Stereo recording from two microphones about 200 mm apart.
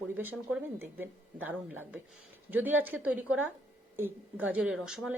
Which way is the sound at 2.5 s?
10° right (ahead or behind).